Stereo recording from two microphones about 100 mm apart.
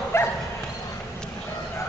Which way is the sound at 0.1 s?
30° left (ahead or behind).